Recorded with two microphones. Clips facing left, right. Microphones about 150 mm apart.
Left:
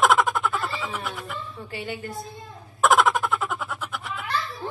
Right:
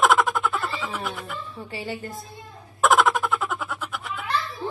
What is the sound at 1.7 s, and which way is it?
Speech, 35° right (ahead or behind).